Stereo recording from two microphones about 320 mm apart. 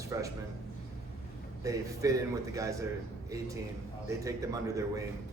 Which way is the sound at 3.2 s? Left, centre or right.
Centre.